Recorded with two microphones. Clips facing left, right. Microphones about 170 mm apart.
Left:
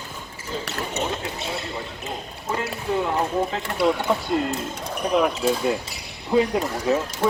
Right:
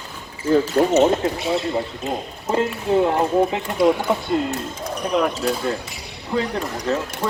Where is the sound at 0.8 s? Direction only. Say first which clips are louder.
Right 10 dB; 45° right (ahead or behind).